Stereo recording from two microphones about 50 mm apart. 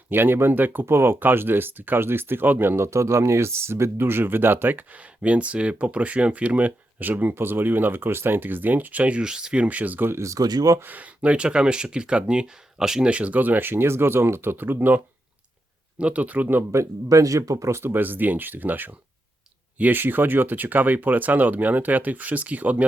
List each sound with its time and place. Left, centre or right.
0.1 s speech: right
0.9 s speech: right
2.7 s speech: right
9.2 s speech: centre
9.6 s speech: right
10.1 s speech: right
10.8 s speech: right; by 13.1 s centre
13.1 s speech: right
16.0 s speech: right
16.7 s speech: right
17.8 s speech: right